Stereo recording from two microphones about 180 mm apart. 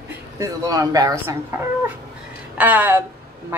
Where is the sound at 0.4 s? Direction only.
20° right (ahead or behind).